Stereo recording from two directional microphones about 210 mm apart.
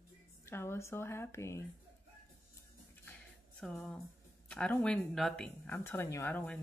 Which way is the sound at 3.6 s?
Centre (ahead or behind).